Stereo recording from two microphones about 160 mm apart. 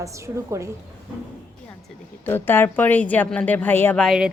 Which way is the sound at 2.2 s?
15° left (ahead or behind).